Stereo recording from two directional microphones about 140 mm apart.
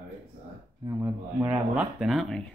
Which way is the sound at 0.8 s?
25° right (ahead or behind).